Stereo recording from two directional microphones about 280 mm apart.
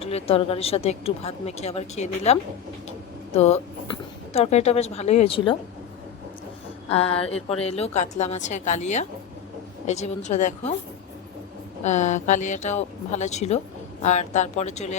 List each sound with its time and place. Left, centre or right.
0.0 s a woman's voice: left
6.9 s a woman's voice: left
11.8 s a woman's voice: left